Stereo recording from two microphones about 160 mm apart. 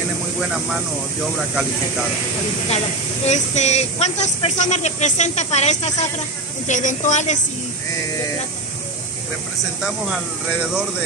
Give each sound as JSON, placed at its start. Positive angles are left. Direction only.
{"t": 3.3, "sound": "speech", "side_deg": 45}